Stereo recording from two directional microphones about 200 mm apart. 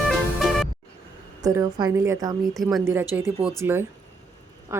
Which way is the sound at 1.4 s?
15° right (ahead or behind).